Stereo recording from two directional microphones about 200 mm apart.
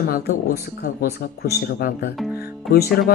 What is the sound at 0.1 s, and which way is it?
Speech, 50° left (ahead or behind).